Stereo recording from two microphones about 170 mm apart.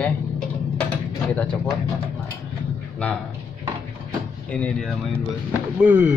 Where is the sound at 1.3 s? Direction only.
10° left (ahead or behind).